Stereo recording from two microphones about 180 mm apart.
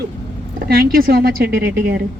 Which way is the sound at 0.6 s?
55° right (ahead or behind).